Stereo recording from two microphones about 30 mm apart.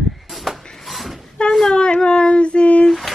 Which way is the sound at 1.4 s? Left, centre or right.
Left.